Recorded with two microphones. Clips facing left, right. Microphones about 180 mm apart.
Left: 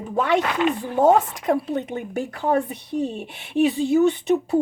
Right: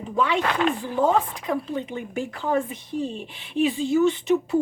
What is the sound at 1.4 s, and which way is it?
Speech, 65° left (ahead or behind).